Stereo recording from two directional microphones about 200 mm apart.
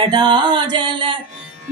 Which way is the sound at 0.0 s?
25° right (ahead or behind).